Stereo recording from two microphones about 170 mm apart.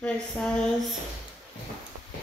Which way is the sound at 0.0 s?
5° left (ahead or behind).